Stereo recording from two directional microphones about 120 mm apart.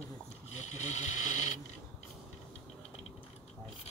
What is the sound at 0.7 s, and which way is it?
Speech, 75° left (ahead or behind).